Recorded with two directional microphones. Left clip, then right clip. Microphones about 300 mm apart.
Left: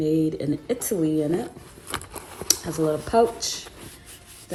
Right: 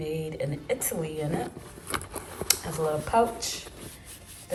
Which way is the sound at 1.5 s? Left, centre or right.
Centre.